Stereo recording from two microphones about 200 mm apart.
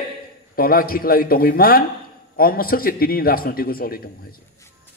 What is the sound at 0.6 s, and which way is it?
A man's voice, 45° left (ahead or behind).